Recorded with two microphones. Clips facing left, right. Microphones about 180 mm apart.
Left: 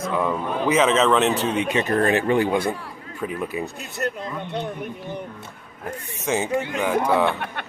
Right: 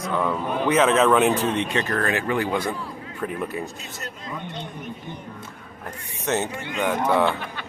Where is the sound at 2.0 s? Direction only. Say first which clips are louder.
Left 7 dB; 25° left (ahead or behind).